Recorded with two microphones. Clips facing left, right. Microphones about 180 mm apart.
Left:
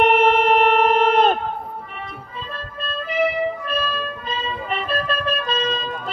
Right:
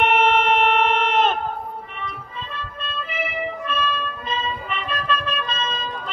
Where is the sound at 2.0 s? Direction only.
40° left (ahead or behind).